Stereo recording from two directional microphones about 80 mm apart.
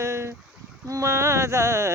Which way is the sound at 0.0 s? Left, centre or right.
Right.